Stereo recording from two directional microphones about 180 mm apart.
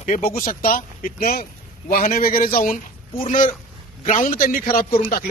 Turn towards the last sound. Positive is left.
turn(degrees=50)  # may be behind; listen again after turning